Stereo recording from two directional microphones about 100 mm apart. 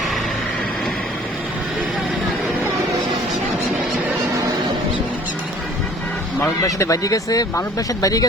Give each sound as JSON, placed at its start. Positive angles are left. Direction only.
{"t": 6.6, "sound": "speech", "side_deg": 35}